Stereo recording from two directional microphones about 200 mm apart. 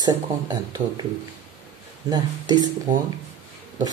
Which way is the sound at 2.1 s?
20° right (ahead or behind).